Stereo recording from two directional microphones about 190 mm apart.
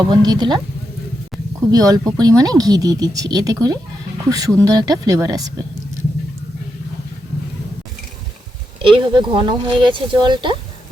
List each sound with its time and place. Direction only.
0.0 s speech: 20° right (ahead or behind)
1.7 s speech: 20° right (ahead or behind)
8.8 s speech: 25° right (ahead or behind)